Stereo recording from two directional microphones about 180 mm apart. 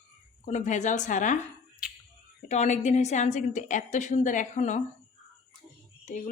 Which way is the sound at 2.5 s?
40° left (ahead or behind).